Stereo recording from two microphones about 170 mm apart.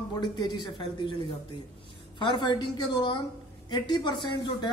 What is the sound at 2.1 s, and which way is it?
Speech, 25° left (ahead or behind).